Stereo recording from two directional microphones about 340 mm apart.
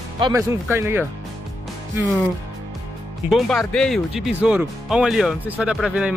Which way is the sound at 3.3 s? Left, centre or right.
Centre.